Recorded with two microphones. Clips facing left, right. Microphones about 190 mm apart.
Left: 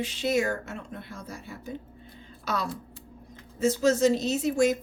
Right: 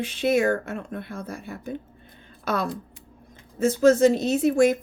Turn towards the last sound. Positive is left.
turn(degrees=-55)  # may be behind; listen again after turning